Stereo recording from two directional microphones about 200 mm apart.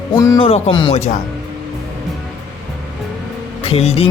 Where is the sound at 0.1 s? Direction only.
20° left (ahead or behind).